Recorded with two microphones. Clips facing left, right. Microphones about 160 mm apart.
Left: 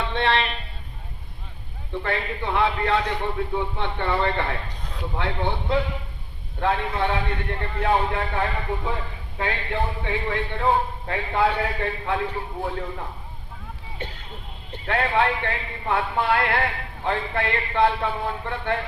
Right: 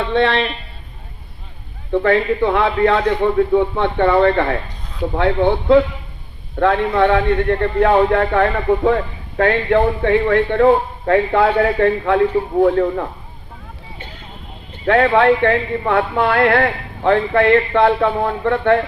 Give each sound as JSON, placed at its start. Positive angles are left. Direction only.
{"t": 0.0, "sound": "a man's voice", "side_deg": -60}
{"t": 1.9, "sound": "a man's voice", "side_deg": -60}
{"t": 14.8, "sound": "a man's voice", "side_deg": -65}